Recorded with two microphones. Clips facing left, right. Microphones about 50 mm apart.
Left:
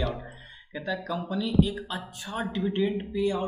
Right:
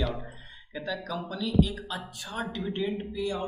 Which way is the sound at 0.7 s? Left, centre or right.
Centre.